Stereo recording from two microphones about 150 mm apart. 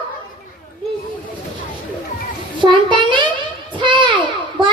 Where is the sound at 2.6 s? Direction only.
30° right (ahead or behind).